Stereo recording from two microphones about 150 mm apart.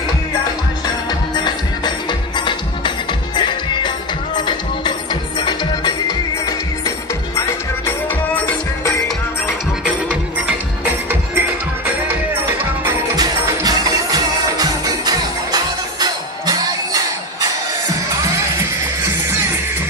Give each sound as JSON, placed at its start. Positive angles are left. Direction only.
{"t": 2.0, "sound": "music", "side_deg": 30}
{"t": 7.3, "sound": "music", "side_deg": 20}
{"t": 11.1, "sound": "music", "side_deg": -15}